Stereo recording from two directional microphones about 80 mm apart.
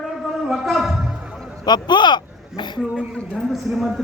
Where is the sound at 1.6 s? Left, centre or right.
Left.